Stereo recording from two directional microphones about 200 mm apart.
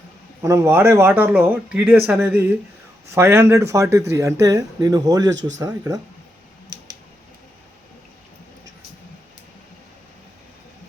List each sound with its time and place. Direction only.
0.4 s a man's voice: 15° right (ahead or behind)